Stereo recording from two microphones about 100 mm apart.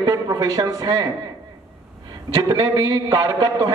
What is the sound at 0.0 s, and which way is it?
Speech, 40° right (ahead or behind).